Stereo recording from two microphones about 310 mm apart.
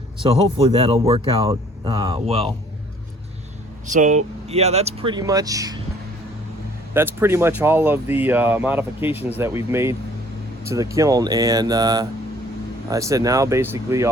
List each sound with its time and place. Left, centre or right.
0.2 s speech: centre
3.8 s speech: right
6.9 s speech: centre